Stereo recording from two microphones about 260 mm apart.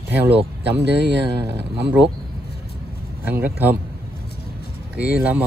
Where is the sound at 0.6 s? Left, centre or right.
Right.